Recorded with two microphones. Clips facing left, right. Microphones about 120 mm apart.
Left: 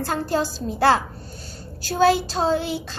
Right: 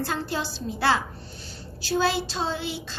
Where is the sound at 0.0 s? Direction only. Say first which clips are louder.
Left 5 dB; 45° left (ahead or behind).